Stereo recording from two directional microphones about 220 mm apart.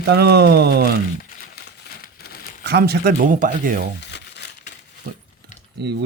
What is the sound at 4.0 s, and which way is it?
Crumpling, 50° left (ahead or behind).